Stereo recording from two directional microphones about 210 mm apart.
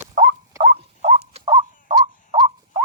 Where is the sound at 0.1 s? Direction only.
30° right (ahead or behind).